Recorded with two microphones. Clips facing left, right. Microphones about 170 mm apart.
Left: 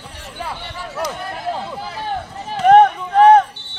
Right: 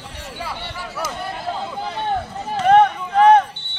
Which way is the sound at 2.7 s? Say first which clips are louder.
Left 3 dB; 40° left (ahead or behind).